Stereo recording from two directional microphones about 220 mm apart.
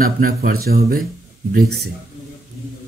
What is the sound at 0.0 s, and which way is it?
Speech, 40° right (ahead or behind).